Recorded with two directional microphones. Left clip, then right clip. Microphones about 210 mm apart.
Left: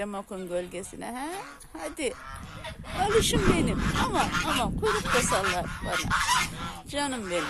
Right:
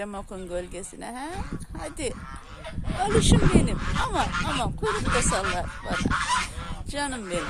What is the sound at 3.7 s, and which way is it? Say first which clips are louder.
Fowl: even; 55° left (ahead or behind).